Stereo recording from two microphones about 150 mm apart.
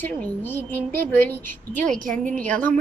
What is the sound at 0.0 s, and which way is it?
A woman's voice, 10° left (ahead or behind).